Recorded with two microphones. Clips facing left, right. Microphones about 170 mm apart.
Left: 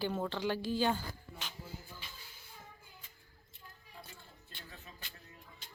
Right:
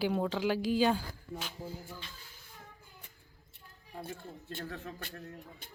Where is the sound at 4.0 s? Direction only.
50° right (ahead or behind).